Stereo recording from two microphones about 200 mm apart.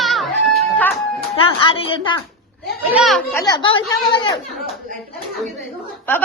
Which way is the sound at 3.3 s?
20° left (ahead or behind).